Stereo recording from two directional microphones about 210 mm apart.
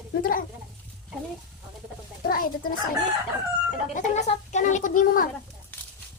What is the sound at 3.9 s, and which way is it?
A child's voice, 35° left (ahead or behind).